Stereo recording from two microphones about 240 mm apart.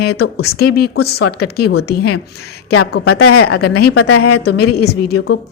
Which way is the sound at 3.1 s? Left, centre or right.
Left.